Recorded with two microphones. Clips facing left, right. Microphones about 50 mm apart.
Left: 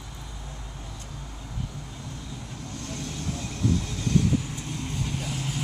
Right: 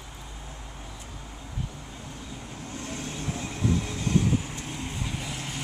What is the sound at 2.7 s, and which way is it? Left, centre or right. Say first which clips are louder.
Vehicle: right 1 dB; right.